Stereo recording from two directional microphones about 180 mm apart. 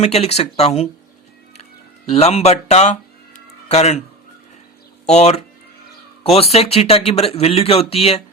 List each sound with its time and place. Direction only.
0.0 s speech: 35° left (ahead or behind)
2.0 s a man's voice: 35° left (ahead or behind)
5.0 s speech: 35° left (ahead or behind)